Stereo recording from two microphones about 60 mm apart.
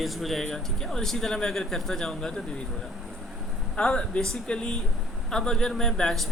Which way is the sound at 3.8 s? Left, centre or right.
Centre.